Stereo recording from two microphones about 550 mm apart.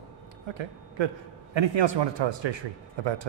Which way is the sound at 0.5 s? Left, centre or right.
Right.